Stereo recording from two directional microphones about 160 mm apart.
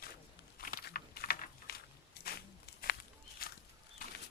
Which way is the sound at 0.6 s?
65° left (ahead or behind).